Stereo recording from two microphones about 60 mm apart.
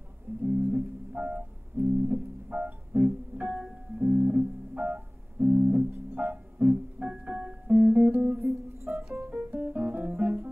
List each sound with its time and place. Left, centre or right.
0.3 s music: right
8.8 s music: right
9.2 s music: right